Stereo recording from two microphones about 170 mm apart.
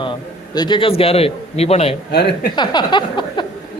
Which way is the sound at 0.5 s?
25° left (ahead or behind).